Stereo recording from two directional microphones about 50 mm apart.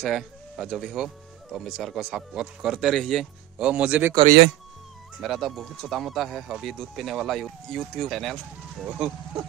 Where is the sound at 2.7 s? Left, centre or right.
Centre.